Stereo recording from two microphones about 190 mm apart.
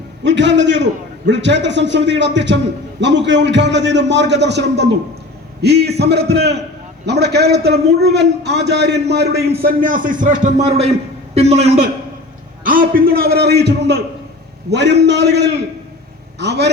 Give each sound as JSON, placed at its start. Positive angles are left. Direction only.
{"t": 0.3, "sound": "a man's voice", "side_deg": -70}
{"t": 12.6, "sound": "a man's voice", "side_deg": -45}